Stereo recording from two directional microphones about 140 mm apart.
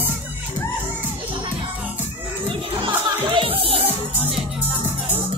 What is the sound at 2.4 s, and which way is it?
Music, 40° right (ahead or behind).